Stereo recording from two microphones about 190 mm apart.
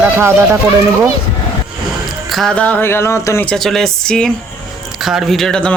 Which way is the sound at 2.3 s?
Centre (ahead or behind).